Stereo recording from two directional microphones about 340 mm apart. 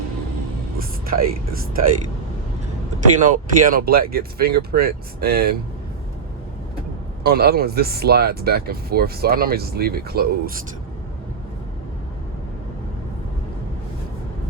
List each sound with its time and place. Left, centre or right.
0.8 s speech: right
3.2 s speech: right
7.3 s speech: right